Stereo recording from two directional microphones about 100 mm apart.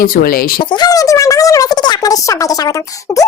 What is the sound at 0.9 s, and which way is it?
Speech, 35° left (ahead or behind).